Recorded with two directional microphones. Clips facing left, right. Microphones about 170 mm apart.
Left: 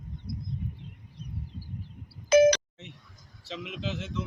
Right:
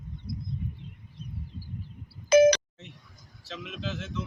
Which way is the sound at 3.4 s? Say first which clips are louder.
Left 1 dB; 15° left (ahead or behind).